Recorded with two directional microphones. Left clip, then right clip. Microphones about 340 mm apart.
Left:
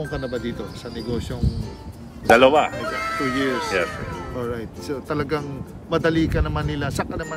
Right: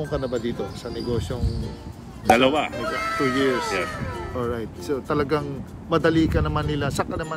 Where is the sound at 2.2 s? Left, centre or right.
Centre.